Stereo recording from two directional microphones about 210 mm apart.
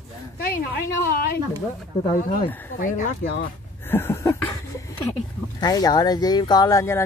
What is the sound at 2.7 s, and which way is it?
Speech, 40° left (ahead or behind).